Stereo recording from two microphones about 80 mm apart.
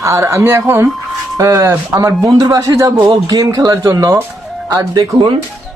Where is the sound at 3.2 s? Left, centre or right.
Right.